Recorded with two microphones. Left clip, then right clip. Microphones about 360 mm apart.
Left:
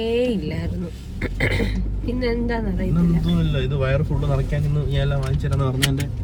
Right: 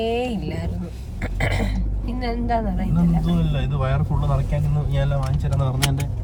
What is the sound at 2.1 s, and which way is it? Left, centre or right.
Speech, centre.